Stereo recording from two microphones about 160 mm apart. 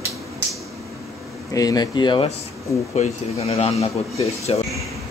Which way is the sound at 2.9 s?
45° left (ahead or behind).